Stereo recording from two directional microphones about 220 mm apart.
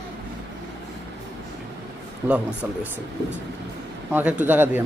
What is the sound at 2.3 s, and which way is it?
Speech, 5° right (ahead or behind).